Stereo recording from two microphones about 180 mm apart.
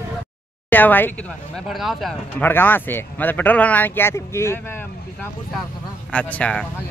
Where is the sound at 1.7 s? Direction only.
Centre (ahead or behind); by 4.6 s 15° left (ahead or behind).